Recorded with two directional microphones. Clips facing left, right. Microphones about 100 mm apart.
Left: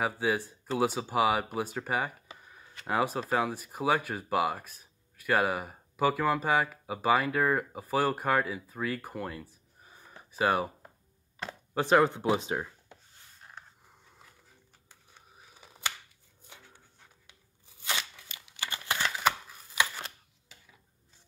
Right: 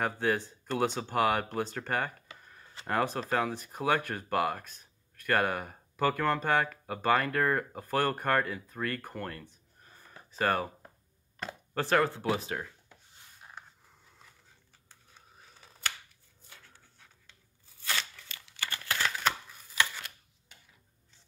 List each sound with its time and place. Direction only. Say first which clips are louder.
0.0 s speech: even; 5° left (ahead or behind)
11.7 s speech: left 4 dB; 15° left (ahead or behind)
14.9 s camera: even; 15° left (ahead or behind)
16.4 s a sound: left 2 dB; 20° left (ahead or behind)